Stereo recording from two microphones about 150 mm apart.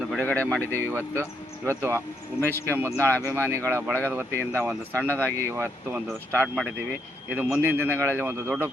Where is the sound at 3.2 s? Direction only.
15° right (ahead or behind).